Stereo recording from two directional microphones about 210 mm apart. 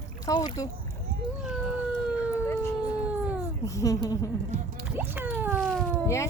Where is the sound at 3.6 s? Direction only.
15° left (ahead or behind).